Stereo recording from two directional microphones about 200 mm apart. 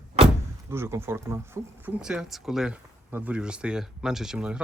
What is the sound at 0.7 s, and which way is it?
Speech, 10° right (ahead or behind).